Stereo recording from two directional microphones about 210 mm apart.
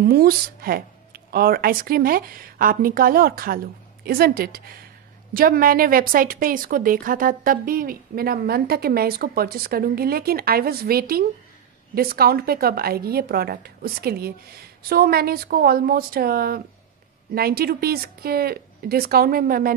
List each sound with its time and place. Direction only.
0.0 s a woman's voice: 45° right (ahead or behind)